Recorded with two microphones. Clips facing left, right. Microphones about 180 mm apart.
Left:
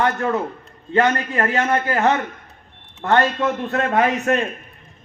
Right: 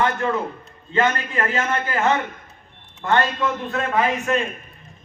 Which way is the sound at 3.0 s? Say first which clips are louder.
Left 3 dB; 65° left (ahead or behind).